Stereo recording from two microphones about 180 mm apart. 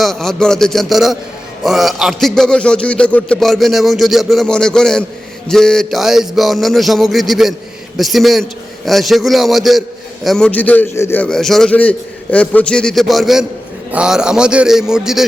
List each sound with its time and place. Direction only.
0.0 s a man's voice: centre (ahead or behind)